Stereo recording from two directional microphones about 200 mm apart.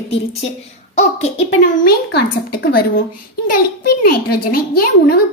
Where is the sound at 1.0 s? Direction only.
35° left (ahead or behind).